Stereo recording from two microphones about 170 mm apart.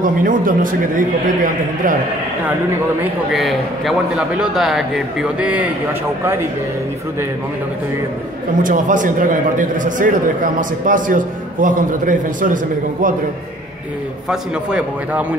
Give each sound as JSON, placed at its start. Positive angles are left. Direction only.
{"t": 0.0, "sound": "a man's voice", "side_deg": -50}
{"t": 3.3, "sound": "a man's voice", "side_deg": 0}
{"t": 8.6, "sound": "a man's voice", "side_deg": -50}
{"t": 14.3, "sound": "a man's voice", "side_deg": -5}